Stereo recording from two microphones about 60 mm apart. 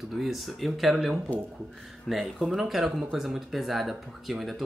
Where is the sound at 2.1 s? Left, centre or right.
Centre.